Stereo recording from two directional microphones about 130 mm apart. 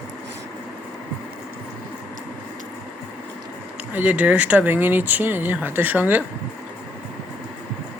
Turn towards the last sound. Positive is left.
turn(degrees=-15)  # may be behind; listen again after turning